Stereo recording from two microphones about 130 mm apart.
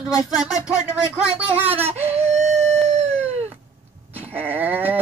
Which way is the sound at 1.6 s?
15° right (ahead or behind).